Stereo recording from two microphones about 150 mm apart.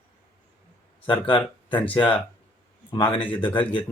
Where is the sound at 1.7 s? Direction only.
10° left (ahead or behind).